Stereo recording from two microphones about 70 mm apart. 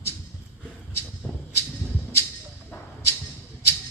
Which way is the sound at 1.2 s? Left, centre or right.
Left.